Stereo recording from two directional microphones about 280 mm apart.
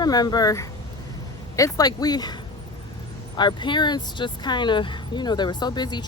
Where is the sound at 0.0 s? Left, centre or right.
Centre.